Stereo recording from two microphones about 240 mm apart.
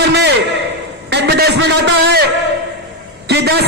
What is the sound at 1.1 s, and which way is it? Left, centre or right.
A man's voice, right.